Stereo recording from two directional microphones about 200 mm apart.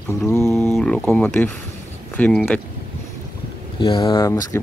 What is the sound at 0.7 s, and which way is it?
Speech, 5° left (ahead or behind).